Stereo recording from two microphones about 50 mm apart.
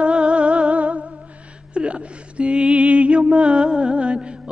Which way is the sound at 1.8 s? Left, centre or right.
Right.